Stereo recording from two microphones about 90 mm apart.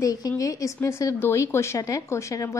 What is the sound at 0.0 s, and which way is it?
A woman's voice, 40° left (ahead or behind).